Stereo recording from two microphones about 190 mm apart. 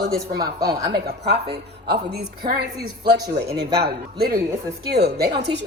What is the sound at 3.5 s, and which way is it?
Speech, 55° right (ahead or behind).